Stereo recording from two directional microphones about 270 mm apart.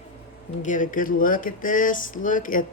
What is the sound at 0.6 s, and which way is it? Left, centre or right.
Speech, left.